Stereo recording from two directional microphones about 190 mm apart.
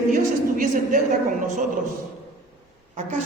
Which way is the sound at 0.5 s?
45° right (ahead or behind).